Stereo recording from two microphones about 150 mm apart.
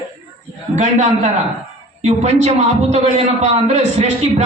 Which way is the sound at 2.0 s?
45° right (ahead or behind).